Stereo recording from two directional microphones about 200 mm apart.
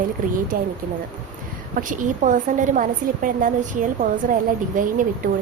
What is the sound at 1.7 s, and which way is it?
Speech, 40° right (ahead or behind).